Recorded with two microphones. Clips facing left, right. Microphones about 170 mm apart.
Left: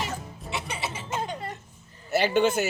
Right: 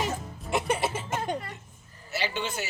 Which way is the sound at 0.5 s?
50° right (ahead or behind).